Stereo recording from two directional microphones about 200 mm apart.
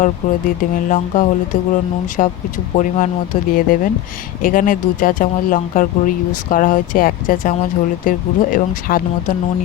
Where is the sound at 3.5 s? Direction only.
45° left (ahead or behind).